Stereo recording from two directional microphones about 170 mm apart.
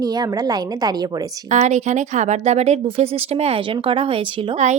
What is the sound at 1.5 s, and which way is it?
Speech, 45° right (ahead or behind).